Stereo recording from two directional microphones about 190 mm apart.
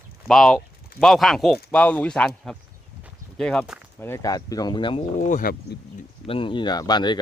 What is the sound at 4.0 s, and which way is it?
Speech, 15° left (ahead or behind).